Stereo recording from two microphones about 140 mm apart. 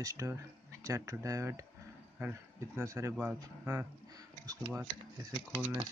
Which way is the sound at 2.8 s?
20° right (ahead or behind).